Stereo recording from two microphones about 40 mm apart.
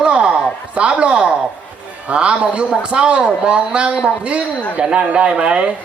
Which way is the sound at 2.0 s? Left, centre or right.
Right.